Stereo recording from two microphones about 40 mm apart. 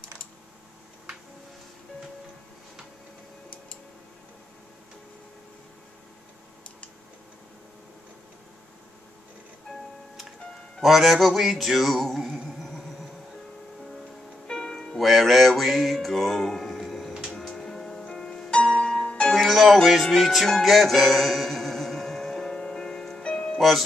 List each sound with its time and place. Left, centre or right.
9.7 s music: centre
12.4 s a sound: centre
14.5 s music: centre
15.0 s music: centre; by 19.3 s left
19.3 s music: centre